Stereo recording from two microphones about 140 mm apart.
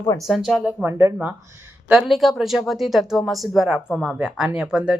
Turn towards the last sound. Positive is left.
turn(degrees=-5)  # may be behind; listen again after turning